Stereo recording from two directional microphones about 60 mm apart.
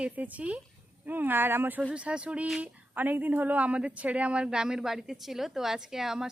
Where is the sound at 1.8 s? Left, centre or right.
Centre.